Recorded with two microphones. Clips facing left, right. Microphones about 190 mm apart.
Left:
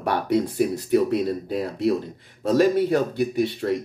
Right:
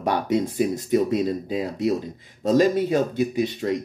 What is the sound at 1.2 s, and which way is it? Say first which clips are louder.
Speech: right 1 dB; centre (ahead or behind).